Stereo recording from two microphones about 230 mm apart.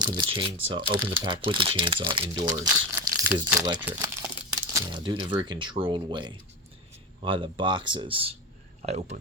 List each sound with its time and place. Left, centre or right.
0.3 s speech: right